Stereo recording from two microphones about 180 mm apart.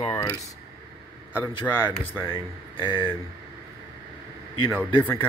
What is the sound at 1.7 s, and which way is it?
Speech, 5° left (ahead or behind).